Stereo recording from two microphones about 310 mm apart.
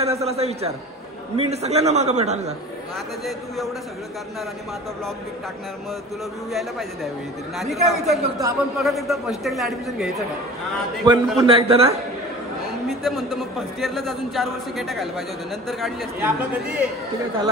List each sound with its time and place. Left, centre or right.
0.0 s a man's voice: centre
3.3 s a man's voice: centre
6.5 s a man's voice: centre
11.1 s a man's voice: centre
12.8 s a man's voice: centre